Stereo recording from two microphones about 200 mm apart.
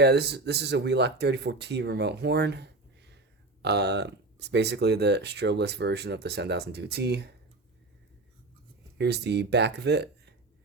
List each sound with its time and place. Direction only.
0.0 s speech: 55° right (ahead or behind)
9.0 s speech: 55° right (ahead or behind)